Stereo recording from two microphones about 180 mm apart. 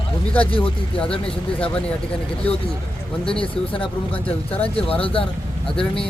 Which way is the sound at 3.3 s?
30° left (ahead or behind).